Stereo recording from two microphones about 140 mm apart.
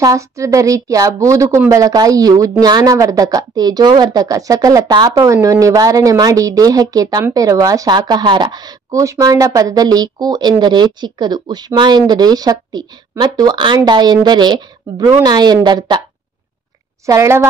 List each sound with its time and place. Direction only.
0.0 s speech: 25° right (ahead or behind)
17.0 s speech: 20° right (ahead or behind)